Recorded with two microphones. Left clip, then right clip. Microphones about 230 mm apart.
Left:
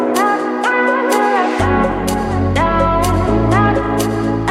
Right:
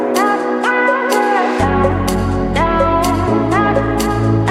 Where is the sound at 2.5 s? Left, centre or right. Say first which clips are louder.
Right 1 dB; centre.